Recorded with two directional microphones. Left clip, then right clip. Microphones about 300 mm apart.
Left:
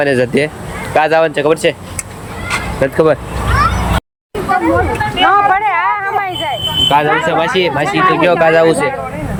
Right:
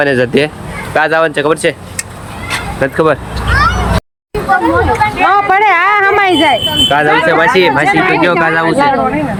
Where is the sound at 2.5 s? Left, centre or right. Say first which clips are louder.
Even; centre.